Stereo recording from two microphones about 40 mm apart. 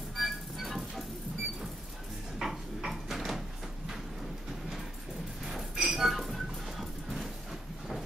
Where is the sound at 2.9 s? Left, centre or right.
Centre.